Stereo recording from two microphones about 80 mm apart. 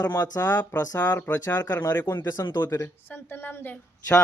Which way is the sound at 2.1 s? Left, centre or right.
Left.